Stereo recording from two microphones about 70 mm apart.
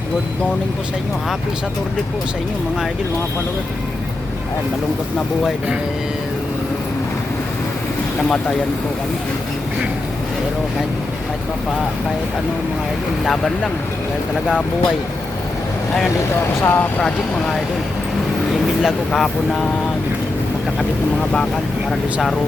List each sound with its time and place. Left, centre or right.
13.2 s speech: centre
16.6 s speech: left
17.0 s speech: centre
18.8 s speech: centre